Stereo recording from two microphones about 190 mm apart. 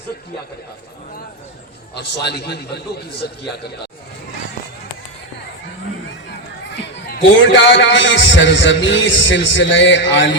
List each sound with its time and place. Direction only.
2.0 s a man's voice: 60° left (ahead or behind)
7.1 s a man's voice: 65° left (ahead or behind)